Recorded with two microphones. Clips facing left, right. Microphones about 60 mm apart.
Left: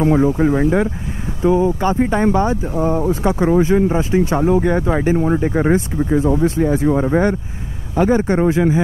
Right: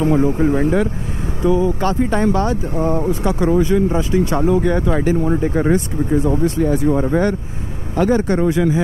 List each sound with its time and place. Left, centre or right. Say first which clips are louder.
0.0 s speech: left 1 dB; left
6.0 s speech: left 1 dB; left